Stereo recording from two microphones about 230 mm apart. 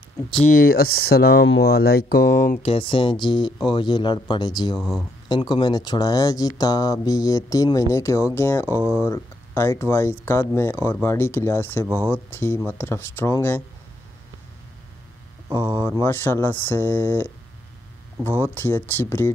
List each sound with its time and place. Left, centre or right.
0.5 s speech: left
2.6 s speech: left
4.7 s speech: centre
5.3 s speech: centre
15.5 s speech: centre
15.9 s speech: centre
18.4 s speech: centre